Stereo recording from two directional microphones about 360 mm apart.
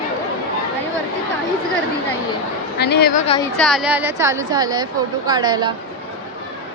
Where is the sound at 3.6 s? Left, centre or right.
Centre.